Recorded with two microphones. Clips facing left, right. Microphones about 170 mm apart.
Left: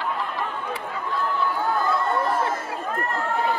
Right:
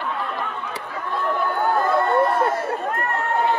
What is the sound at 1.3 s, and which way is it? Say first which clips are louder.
Chatter: right 5 dB; 65° right (ahead or behind).